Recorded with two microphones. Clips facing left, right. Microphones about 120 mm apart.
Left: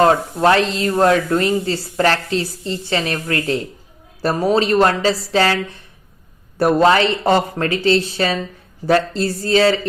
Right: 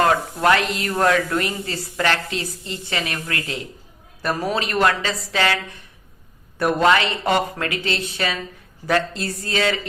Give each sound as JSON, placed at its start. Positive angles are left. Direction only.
{"t": 0.0, "sound": "speech", "side_deg": 30}
{"t": 6.6, "sound": "speech", "side_deg": 35}